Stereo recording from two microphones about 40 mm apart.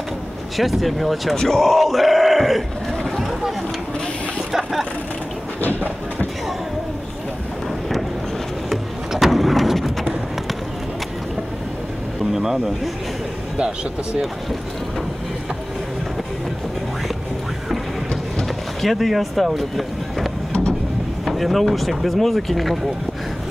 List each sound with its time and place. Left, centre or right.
0.6 s speech: centre
1.3 s speech: centre
1.6 s speech: centre
4.5 s speech: centre
8.6 s thunder: centre
12.3 s speech: centre
18.8 s speech: centre
21.3 s speech: centre